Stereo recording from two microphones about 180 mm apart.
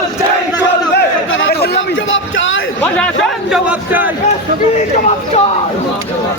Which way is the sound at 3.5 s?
10° right (ahead or behind).